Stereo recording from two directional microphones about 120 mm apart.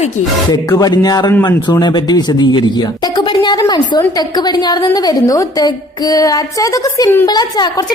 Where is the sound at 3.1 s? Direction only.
40° left (ahead or behind).